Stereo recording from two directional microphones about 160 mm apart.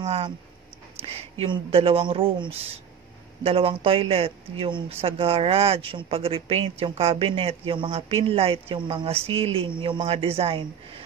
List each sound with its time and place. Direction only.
0.0 s speech: 40° right (ahead or behind)